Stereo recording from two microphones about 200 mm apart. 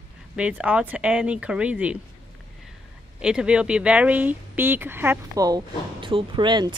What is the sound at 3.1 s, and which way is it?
Speech, 5° right (ahead or behind).